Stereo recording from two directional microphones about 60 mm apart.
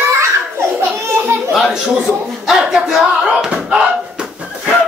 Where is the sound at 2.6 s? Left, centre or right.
Centre.